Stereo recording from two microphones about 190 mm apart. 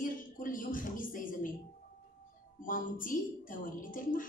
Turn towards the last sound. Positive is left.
turn(degrees=45)  # may be behind; listen again after turning